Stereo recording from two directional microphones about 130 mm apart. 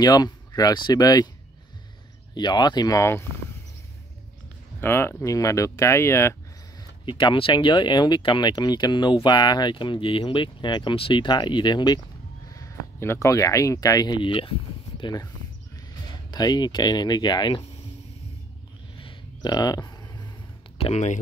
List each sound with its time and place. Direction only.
0.0 s speech: 30° left (ahead or behind)
2.3 s speech: 35° left (ahead or behind)
4.7 s speech: 15° left (ahead or behind)
6.8 s speech: 35° left (ahead or behind)
16.3 s speech: 30° left (ahead or behind)
18.9 s a sound: 40° left (ahead or behind)
19.5 s a sound: 30° left (ahead or behind)
20.7 s speech: 55° left (ahead or behind)